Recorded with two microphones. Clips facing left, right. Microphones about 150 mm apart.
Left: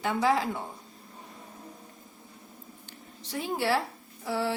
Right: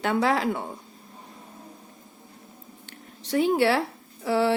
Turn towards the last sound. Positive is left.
turn(degrees=-75)  # may be behind; listen again after turning